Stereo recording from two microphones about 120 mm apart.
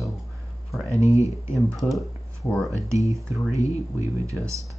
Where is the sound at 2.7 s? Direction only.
25° right (ahead or behind).